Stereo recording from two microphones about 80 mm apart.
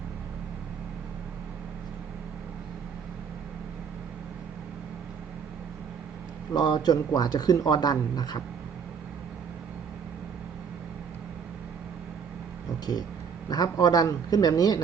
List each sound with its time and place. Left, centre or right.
6.5 s speech: left
12.8 s a man's voice: left